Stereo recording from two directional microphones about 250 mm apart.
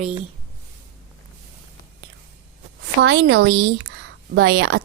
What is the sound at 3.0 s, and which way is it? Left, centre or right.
A woman's voice, right.